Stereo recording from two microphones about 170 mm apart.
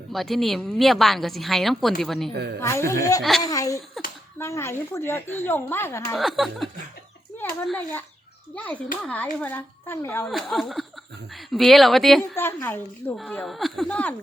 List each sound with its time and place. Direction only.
0.1 s speech: centre (ahead or behind)
2.3 s a woman's voice: 75° right (ahead or behind)
2.6 s a woman's voice: 15° left (ahead or behind)
3.2 s speech: centre (ahead or behind)
3.4 s a woman's voice: 20° left (ahead or behind)
6.1 s speech: centre (ahead or behind)
7.7 s a woman's voice: 10° left (ahead or behind)
10.2 s speech: centre (ahead or behind)
12.4 s a woman's voice: 15° left (ahead or behind)
13.4 s speech: centre (ahead or behind)